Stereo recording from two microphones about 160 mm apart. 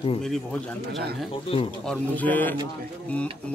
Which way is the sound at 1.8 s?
5° left (ahead or behind).